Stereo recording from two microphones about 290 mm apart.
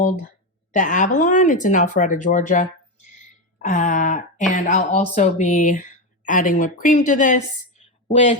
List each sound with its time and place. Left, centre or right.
0.7 s a woman's voice: left